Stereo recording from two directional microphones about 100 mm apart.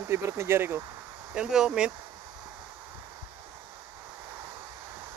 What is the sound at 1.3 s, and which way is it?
Speech, 5° right (ahead or behind).